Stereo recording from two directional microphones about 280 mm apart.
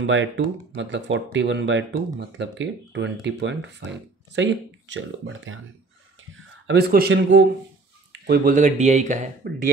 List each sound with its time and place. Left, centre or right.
0.0 s speech: right